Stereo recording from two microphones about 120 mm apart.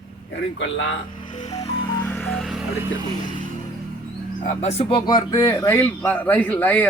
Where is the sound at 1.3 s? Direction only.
70° left (ahead or behind).